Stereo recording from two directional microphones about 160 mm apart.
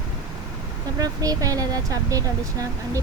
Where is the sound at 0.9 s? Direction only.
20° right (ahead or behind).